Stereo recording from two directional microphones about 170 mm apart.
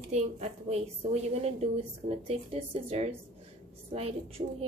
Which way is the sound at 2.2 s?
35° right (ahead or behind).